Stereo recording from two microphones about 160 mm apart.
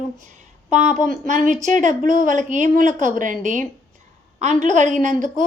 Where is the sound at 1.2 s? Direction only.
50° right (ahead or behind).